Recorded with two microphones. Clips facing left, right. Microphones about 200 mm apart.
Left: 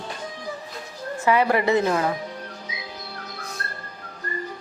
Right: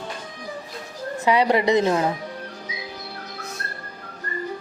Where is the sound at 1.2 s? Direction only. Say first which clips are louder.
Right 1 dB; 15° right (ahead or behind).